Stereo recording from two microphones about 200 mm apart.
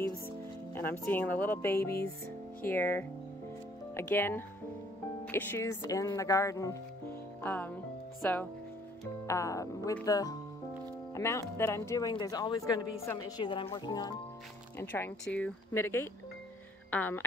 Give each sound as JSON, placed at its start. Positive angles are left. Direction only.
{"t": 0.7, "sound": "speech", "side_deg": 10}